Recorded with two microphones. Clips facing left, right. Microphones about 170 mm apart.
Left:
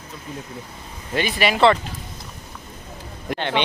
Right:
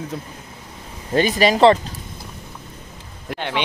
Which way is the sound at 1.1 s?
40° right (ahead or behind).